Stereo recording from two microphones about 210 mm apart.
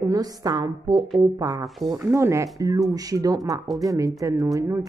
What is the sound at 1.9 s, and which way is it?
Speech, 15° right (ahead or behind).